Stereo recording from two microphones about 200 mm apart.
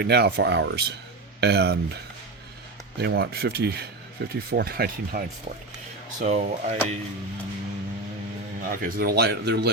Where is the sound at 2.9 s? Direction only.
55° right (ahead or behind).